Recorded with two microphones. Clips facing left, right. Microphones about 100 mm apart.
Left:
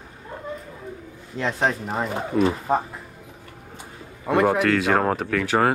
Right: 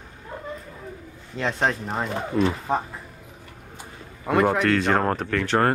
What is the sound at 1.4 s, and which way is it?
Speech, centre (ahead or behind).